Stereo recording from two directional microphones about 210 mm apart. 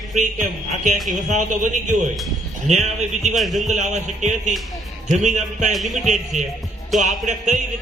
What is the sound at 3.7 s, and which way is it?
Speech, 35° right (ahead or behind).